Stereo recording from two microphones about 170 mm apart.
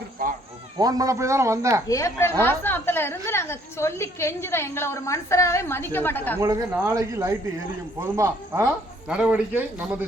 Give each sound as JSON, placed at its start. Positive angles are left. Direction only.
{"t": 0.8, "sound": "speech", "side_deg": -20}
{"t": 1.9, "sound": "a woman's voice", "side_deg": 20}
{"t": 6.4, "sound": "speech", "side_deg": -20}
{"t": 8.6, "sound": "speech", "side_deg": -5}